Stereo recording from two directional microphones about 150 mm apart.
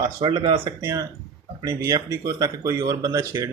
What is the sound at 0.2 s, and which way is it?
Speech, 35° right (ahead or behind).